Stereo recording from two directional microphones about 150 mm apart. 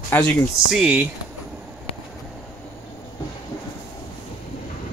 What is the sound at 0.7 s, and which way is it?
Speech, 10° right (ahead or behind).